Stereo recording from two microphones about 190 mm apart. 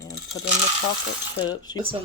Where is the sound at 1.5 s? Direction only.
20° left (ahead or behind).